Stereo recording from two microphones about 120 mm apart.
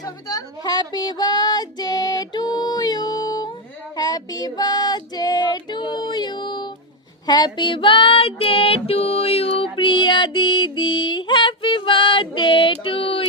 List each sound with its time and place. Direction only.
0.0 s speech: 30° left (ahead or behind)
3.9 s female singing: 30° left (ahead or behind); by 13.2 s 50° left (ahead or behind)